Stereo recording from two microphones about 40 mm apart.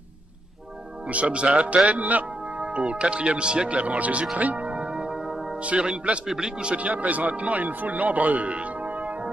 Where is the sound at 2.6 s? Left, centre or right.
Right.